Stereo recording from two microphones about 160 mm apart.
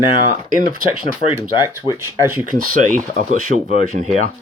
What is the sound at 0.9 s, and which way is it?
Speech, 35° left (ahead or behind).